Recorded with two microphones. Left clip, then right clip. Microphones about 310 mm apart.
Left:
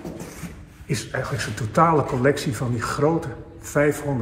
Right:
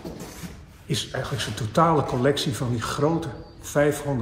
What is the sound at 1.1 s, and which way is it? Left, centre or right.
Speech, centre.